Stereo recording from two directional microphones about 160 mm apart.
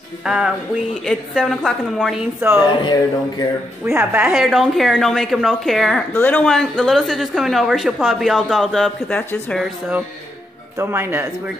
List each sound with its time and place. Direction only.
0.2 s a woman's voice: 5° right (ahead or behind)
2.7 s speech: 30° left (ahead or behind)
4.0 s a woman's voice: 10° right (ahead or behind); by 9.6 s 5° left (ahead or behind)
9.6 s speech: 10° right (ahead or behind)